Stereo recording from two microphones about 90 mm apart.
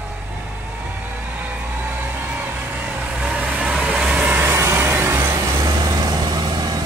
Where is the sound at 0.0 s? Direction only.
20° right (ahead or behind).